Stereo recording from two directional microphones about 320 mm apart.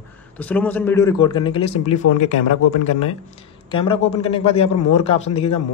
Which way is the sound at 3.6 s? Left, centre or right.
Centre.